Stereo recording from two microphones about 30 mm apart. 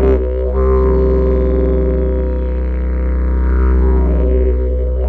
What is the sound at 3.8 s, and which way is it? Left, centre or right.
Music, left.